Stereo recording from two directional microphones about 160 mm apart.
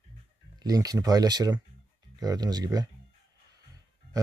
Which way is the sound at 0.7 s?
20° right (ahead or behind).